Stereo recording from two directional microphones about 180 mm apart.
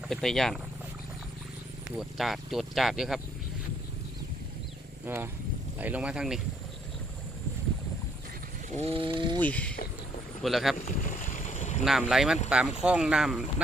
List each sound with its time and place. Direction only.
0.1 s speech: centre (ahead or behind)
2.0 s speech: centre (ahead or behind)
5.0 s speech: 10° right (ahead or behind)
8.7 s speech: 35° right (ahead or behind)
9.4 s speech: 10° left (ahead or behind)
10.8 s boat: 45° left (ahead or behind)
11.9 s speech: centre (ahead or behind)